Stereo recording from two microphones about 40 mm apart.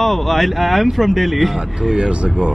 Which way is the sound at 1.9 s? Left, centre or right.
Right.